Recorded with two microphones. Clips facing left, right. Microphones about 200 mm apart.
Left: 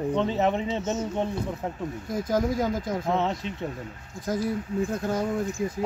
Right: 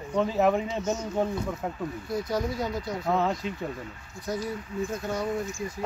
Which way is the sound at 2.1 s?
50° left (ahead or behind).